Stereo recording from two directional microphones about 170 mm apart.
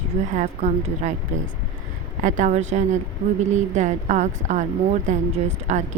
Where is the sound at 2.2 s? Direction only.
50° right (ahead or behind).